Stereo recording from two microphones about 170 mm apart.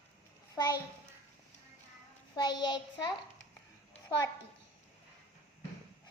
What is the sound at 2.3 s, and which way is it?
Child singing, 25° left (ahead or behind).